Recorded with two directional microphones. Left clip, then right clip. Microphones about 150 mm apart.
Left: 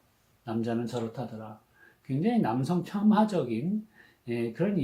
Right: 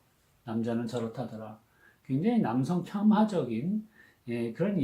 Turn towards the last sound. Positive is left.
turn(degrees=20)  # may be behind; listen again after turning